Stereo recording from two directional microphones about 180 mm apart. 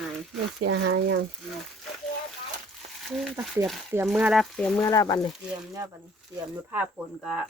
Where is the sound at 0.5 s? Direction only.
90° right.